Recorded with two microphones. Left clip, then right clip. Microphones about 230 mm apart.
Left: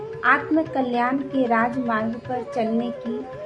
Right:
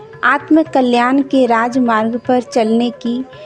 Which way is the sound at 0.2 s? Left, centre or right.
Right.